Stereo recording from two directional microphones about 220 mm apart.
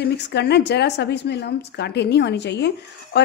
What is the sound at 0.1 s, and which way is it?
Speech, 50° left (ahead or behind).